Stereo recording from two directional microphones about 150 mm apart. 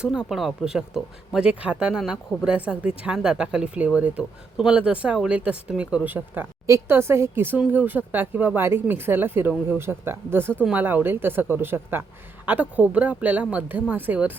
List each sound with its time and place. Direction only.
0.0 s speech: 5° right (ahead or behind)